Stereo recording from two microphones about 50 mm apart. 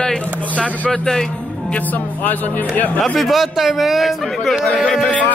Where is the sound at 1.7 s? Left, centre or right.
Left.